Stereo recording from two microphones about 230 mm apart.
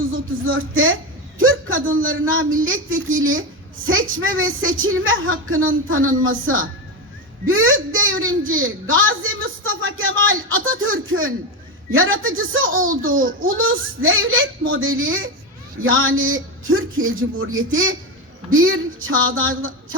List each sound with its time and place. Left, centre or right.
0.1 s speech: right
1.4 s a sound: right
2.0 s a woman's voice: right
12.7 s a child's voice: right
13.6 s a woman's voice: right